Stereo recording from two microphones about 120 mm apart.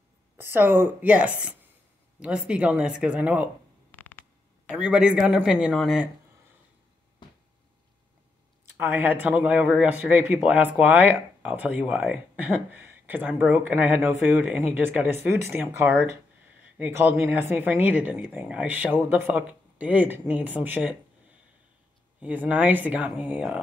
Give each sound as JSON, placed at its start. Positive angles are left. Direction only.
{"t": 0.4, "sound": "speech", "side_deg": -15}
{"t": 3.9, "sound": "a sound", "side_deg": 15}
{"t": 4.7, "sound": "speech", "side_deg": -10}
{"t": 8.7, "sound": "speech", "side_deg": -15}
{"t": 22.2, "sound": "speech", "side_deg": -15}